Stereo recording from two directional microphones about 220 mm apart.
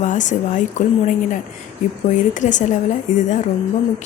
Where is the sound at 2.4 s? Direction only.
35° left (ahead or behind).